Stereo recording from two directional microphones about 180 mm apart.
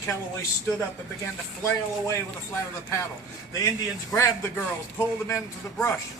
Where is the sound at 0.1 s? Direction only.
15° left (ahead or behind).